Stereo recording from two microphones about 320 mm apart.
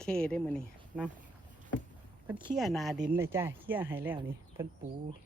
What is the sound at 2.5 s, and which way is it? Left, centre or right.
Speech, centre.